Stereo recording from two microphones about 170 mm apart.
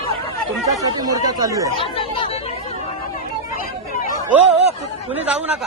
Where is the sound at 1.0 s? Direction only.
20° right (ahead or behind).